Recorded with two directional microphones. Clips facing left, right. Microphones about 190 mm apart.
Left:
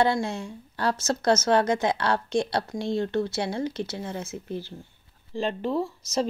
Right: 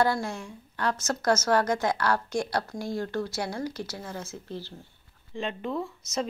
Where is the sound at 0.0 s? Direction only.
25° left (ahead or behind).